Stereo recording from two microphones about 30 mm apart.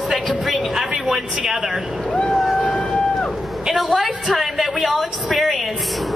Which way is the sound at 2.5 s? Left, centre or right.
Centre.